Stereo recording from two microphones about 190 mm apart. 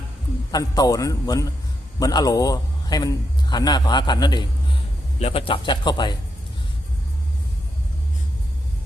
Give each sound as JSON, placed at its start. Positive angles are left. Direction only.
{"t": 0.5, "sound": "a man's voice", "side_deg": 20}